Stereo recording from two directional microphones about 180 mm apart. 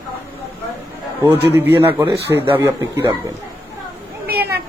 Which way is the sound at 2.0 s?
25° right (ahead or behind).